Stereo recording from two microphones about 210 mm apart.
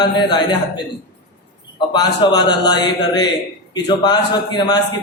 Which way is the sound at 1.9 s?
20° left (ahead or behind).